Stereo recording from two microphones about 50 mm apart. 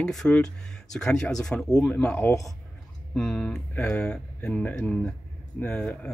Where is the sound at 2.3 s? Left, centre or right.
Left.